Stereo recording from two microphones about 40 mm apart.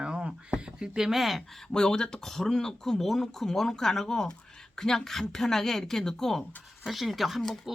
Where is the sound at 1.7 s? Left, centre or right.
Centre.